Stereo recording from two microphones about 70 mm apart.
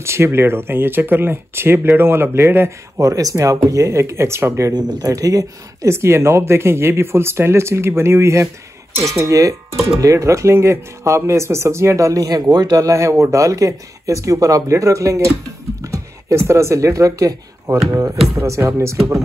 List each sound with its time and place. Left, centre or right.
0.0 s speech: right
3.0 s speech: right
4.7 s speech: right
18.3 s speech: right